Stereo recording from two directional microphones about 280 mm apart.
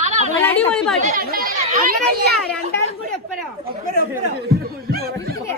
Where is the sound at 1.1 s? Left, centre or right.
Right.